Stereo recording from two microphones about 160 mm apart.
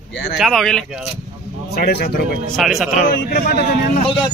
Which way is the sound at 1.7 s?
75° left (ahead or behind).